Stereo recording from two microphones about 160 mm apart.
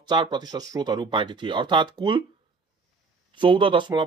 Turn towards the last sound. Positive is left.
turn(degrees=-30)  # may be behind; listen again after turning